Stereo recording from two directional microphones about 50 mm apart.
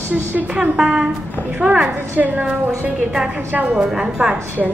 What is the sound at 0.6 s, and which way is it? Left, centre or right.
A woman's voice, centre.